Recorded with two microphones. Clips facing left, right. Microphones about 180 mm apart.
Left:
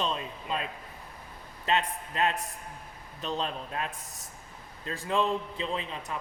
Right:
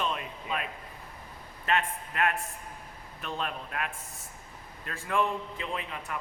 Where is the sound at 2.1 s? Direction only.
25° left (ahead or behind).